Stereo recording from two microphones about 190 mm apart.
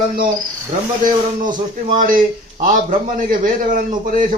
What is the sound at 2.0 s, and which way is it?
A man's voice, 45° right (ahead or behind).